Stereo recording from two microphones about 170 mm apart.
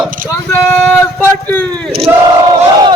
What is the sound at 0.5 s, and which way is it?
Speech, 10° left (ahead or behind).